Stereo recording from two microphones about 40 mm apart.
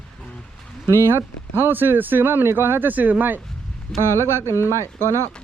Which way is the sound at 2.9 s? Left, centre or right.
Right.